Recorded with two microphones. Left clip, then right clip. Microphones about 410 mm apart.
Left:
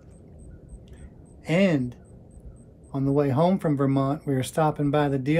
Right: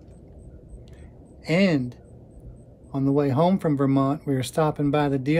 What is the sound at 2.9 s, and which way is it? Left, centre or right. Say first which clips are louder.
Speech: right 1 dB; centre.